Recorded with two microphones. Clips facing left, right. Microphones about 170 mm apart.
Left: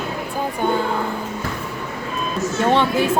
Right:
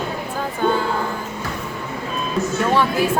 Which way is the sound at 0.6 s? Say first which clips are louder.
Right 2 dB; 15° left (ahead or behind).